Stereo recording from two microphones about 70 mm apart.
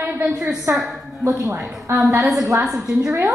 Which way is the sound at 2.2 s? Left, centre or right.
Centre.